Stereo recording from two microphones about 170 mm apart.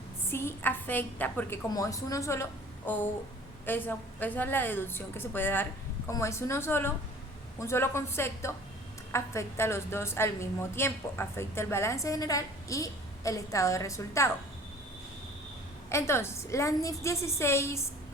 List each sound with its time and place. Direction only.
0.3 s a woman's voice: 15° left (ahead or behind)
15.9 s a woman's voice: 15° left (ahead or behind)